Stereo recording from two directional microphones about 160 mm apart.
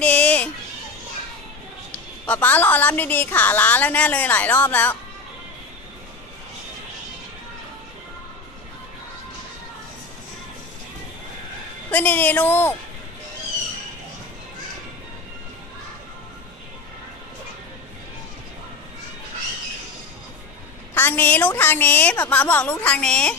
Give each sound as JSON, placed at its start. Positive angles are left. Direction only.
{"t": 0.0, "sound": "a sound", "side_deg": 5}
{"t": 2.2, "sound": "a woman's voice", "side_deg": 10}
{"t": 11.9, "sound": "a woman's voice", "side_deg": 10}
{"t": 20.9, "sound": "a woman's voice", "side_deg": 10}